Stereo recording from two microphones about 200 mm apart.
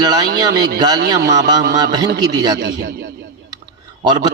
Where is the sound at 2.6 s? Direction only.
60° right (ahead or behind).